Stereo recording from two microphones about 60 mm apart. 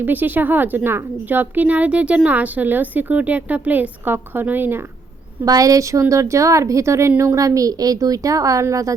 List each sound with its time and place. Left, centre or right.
0.0 s a woman's voice: right
5.5 s a woman's voice: right
7.2 s a woman's voice: right